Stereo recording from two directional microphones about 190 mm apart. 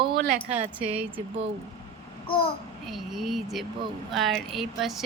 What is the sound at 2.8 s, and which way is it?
A woman's voice, centre (ahead or behind).